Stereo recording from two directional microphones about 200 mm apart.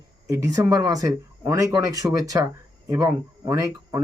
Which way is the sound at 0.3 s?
15° right (ahead or behind).